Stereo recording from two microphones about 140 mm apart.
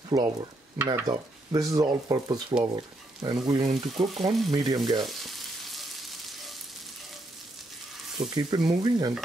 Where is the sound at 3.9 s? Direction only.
Centre (ahead or behind).